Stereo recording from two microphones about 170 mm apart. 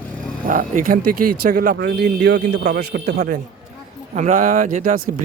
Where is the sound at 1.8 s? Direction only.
75° right (ahead or behind).